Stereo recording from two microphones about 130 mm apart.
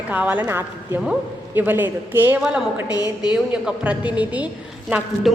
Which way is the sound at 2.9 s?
30° left (ahead or behind).